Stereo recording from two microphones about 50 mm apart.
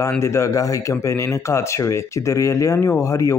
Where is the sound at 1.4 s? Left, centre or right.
Left.